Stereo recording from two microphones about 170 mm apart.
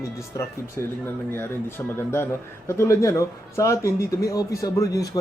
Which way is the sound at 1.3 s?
10° left (ahead or behind).